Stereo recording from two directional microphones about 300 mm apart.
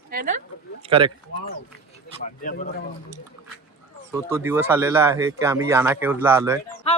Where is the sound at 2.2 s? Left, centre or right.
Left.